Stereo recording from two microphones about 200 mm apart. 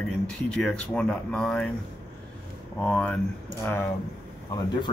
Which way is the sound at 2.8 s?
5° left (ahead or behind).